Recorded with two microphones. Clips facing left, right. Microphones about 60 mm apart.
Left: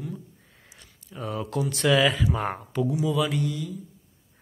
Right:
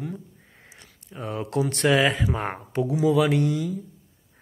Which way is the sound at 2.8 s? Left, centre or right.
Right.